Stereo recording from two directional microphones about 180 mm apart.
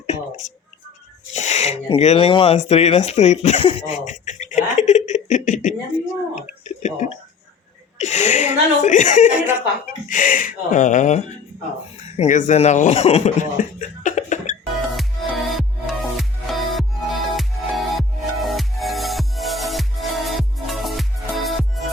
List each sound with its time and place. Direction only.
0.1 s speech: 40° left (ahead or behind)
14.9 s music: centre (ahead or behind)